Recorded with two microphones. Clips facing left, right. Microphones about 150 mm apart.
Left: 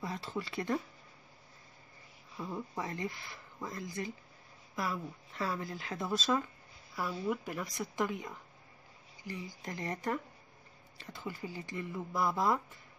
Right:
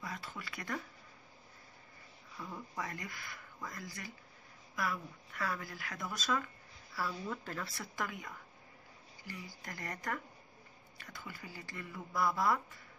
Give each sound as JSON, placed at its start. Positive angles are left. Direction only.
{"t": 0.0, "sound": "speech", "side_deg": 30}
{"t": 2.3, "sound": "speech", "side_deg": 25}
{"t": 7.0, "sound": "speech", "side_deg": 15}